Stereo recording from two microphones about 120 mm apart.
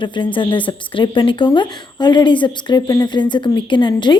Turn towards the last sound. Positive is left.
turn(degrees=40)  # may be behind; listen again after turning